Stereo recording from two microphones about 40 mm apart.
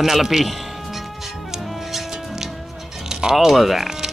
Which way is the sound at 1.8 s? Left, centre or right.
Centre.